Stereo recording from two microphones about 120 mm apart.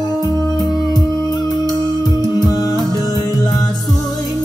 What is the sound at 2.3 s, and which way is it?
Music, 30° left (ahead or behind).